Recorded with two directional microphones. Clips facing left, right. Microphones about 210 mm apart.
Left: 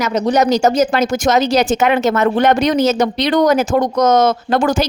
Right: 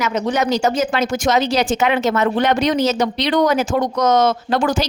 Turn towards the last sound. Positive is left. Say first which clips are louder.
# left 3 dB
turn(degrees=45)  # may be behind; listen again after turning